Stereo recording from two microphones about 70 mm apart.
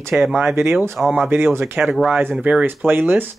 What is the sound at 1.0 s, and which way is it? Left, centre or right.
Speech, centre.